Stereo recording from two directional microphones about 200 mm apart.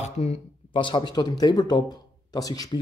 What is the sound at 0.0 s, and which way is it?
Speech, 35° left (ahead or behind).